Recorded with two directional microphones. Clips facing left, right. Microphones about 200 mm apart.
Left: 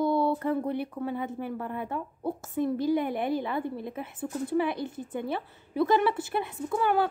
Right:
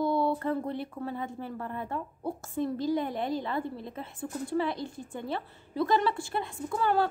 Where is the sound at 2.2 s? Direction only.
Centre (ahead or behind).